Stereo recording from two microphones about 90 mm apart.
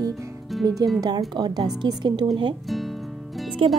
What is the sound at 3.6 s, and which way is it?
Speech, 80° right.